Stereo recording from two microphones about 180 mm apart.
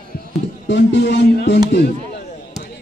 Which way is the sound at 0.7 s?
80° left.